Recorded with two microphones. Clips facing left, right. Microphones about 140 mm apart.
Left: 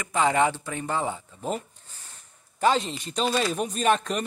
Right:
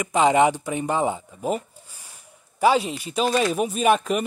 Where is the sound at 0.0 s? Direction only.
20° right (ahead or behind).